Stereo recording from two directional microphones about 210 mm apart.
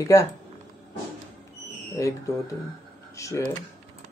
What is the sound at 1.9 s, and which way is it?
Speech, 15° left (ahead or behind).